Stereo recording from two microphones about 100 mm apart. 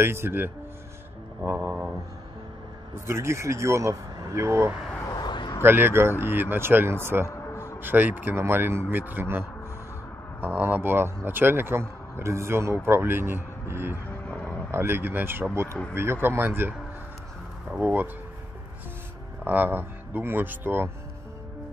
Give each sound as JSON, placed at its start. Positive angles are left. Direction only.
{"t": 0.0, "sound": "speech", "side_deg": -25}
{"t": 3.1, "sound": "speech", "side_deg": -25}
{"t": 5.2, "sound": "a sound", "side_deg": 50}
{"t": 5.6, "sound": "speech", "side_deg": -20}
{"t": 7.2, "sound": "a sound", "side_deg": 30}
{"t": 7.8, "sound": "speech", "side_deg": -20}
{"t": 10.4, "sound": "speech", "side_deg": -20}
{"t": 19.4, "sound": "speech", "side_deg": -20}